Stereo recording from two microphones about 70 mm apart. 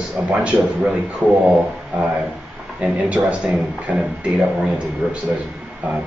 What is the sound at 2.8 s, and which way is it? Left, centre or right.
Speech, centre.